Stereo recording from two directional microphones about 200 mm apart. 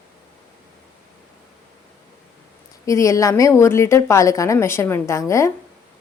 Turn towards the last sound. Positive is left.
turn(degrees=15)  # may be behind; listen again after turning